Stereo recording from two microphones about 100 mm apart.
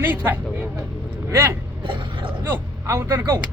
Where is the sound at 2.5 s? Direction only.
25° right (ahead or behind).